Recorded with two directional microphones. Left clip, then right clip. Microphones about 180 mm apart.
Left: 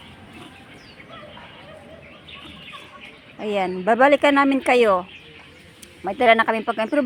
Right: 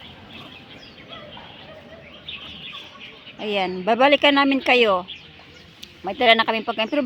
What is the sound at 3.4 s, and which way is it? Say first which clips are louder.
Speech: left 1 dB; 10° left (ahead or behind).